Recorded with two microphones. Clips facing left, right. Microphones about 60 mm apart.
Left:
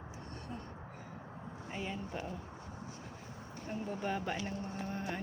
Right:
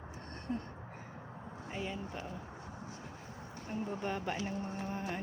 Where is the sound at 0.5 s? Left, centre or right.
Right.